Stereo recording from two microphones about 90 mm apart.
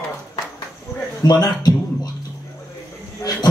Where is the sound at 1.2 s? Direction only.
45° left (ahead or behind).